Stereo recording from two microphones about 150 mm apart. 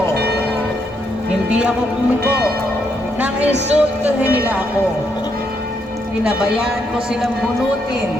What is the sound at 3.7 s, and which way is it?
Speech, 10° right (ahead or behind).